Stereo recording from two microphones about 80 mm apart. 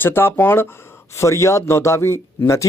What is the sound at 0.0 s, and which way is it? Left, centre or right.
Speech, left.